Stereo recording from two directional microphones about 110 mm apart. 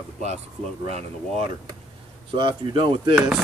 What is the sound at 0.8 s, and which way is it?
Speech, 75° right (ahead or behind).